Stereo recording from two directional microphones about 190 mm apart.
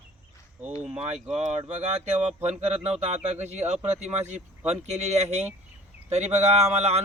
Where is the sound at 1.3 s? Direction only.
35° right (ahead or behind).